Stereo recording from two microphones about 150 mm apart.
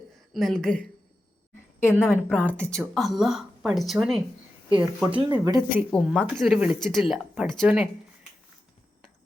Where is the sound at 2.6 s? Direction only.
Centre (ahead or behind).